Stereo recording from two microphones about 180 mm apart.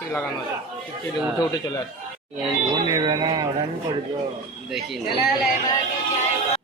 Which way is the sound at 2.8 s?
25° right (ahead or behind).